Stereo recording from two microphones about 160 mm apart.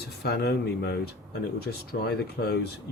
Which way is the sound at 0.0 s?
80° left.